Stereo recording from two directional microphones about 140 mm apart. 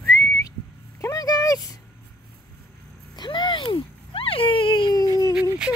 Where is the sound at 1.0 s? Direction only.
30° left (ahead or behind).